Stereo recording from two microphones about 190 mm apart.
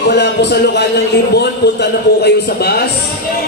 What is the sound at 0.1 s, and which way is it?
A man's voice, 60° left (ahead or behind).